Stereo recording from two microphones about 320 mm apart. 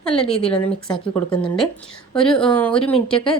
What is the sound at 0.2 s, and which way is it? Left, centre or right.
Speech, centre.